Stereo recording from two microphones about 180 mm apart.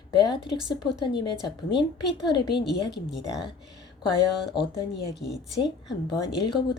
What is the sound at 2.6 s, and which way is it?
Speech, 70° left (ahead or behind).